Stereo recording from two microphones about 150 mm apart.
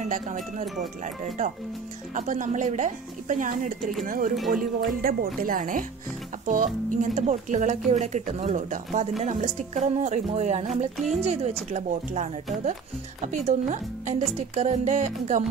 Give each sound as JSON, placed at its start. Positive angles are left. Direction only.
{"t": 0.0, "sound": "speech", "side_deg": -55}
{"t": 4.5, "sound": "speech", "side_deg": -75}